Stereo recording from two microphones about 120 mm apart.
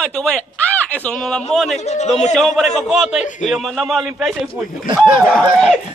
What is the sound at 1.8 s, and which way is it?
Speech, 70° left (ahead or behind).